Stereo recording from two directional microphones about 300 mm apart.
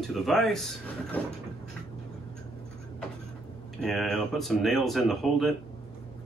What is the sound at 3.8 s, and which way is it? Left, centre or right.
Speech, centre.